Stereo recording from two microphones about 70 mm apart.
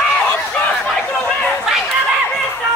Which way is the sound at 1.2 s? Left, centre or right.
Centre.